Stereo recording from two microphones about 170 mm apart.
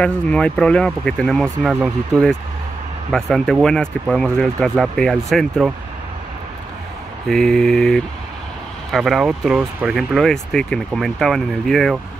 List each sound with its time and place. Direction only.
0.0 s speech: 5° left (ahead or behind)
7.2 s speech: centre (ahead or behind)